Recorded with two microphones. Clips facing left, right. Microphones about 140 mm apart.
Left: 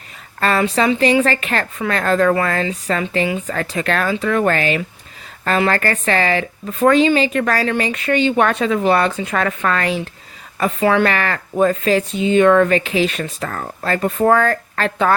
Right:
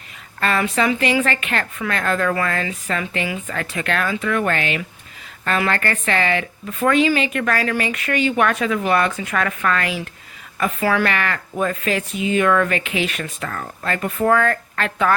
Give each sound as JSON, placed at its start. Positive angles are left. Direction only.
{"t": 0.3, "sound": "speech", "side_deg": 35}